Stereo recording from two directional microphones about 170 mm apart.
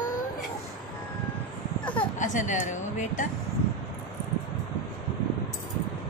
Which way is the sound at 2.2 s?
50° left (ahead or behind).